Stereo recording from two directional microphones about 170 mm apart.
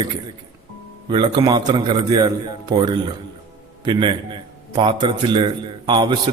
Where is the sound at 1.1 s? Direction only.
25° right (ahead or behind).